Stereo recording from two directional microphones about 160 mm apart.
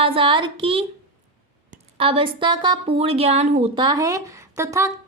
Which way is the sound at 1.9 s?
35° right (ahead or behind).